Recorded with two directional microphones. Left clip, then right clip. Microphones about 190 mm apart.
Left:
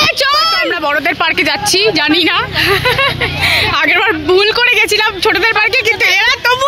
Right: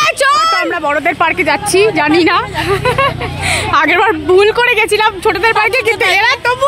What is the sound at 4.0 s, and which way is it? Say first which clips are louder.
Speech: right 1 dB; 10° right (ahead or behind).